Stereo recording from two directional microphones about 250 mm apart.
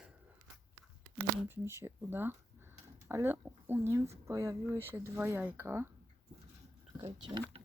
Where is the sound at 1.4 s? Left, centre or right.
Centre.